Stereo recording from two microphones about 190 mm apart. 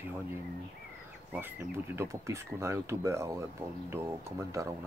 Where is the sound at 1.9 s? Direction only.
15° right (ahead or behind).